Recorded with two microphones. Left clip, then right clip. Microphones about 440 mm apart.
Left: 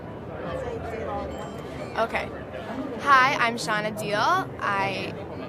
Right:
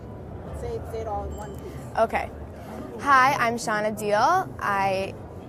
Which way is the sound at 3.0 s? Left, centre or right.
Right.